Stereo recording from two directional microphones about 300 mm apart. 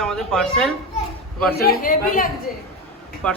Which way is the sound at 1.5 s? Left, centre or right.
Left.